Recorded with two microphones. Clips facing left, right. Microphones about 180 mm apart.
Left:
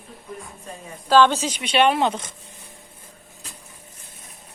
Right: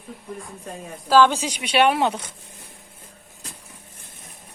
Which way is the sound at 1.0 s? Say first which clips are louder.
Even; 5° right (ahead or behind).